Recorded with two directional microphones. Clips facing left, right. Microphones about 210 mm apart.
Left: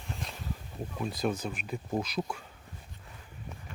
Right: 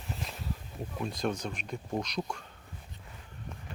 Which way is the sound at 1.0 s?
5° left (ahead or behind).